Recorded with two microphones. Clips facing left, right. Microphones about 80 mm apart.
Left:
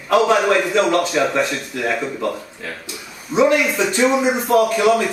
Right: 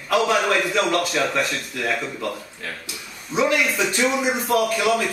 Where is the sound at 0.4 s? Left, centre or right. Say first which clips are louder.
Left 4 dB; centre.